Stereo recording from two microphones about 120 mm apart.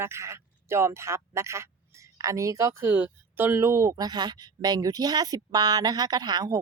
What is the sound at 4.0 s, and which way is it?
A woman's voice, 35° right (ahead or behind).